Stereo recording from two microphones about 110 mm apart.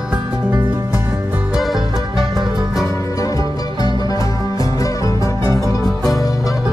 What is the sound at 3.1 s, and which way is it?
Music, 30° left (ahead or behind).